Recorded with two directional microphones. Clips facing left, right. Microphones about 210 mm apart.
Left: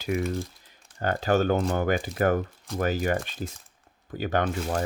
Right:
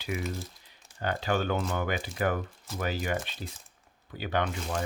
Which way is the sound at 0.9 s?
45° left (ahead or behind).